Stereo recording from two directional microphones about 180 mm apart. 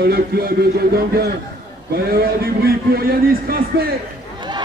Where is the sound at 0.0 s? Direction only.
60° right (ahead or behind).